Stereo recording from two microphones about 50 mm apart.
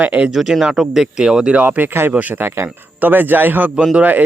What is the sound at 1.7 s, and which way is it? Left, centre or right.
A man's voice, right.